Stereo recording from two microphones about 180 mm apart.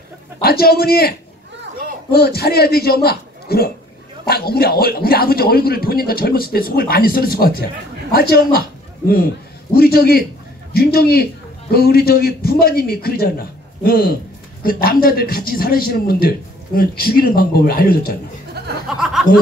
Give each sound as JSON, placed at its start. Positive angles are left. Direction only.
{"t": 0.4, "sound": "speech", "side_deg": 60}
{"t": 9.8, "sound": "speech", "side_deg": 55}
{"t": 18.9, "sound": "a sound", "side_deg": 0}